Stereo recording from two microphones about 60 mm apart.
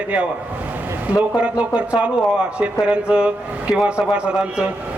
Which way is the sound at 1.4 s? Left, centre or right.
Centre.